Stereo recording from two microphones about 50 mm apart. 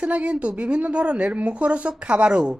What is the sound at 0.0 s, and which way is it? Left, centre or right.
Speech, right.